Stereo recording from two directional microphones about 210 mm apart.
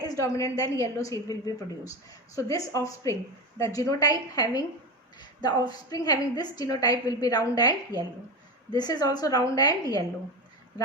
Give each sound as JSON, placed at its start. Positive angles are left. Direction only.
{"t": 0.0, "sound": "a woman's voice", "side_deg": 15}